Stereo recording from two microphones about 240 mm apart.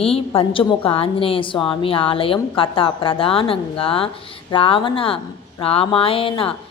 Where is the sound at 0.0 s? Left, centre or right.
Left.